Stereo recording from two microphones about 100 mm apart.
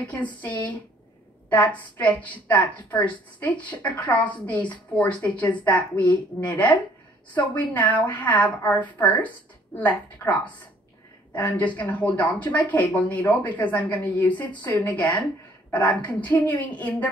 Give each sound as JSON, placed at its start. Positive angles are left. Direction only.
{"t": 0.0, "sound": "speech", "side_deg": 15}